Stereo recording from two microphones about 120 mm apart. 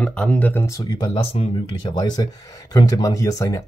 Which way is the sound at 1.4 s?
60° left (ahead or behind).